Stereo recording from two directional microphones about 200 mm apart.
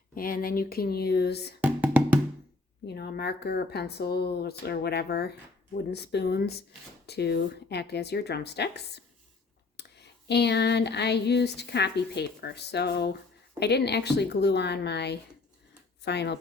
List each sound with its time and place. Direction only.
0.1 s speech: 45° left (ahead or behind)
1.6 s music: 10° right (ahead or behind)
2.8 s speech: 55° left (ahead or behind)
5.7 s a sound: 55° left (ahead or behind)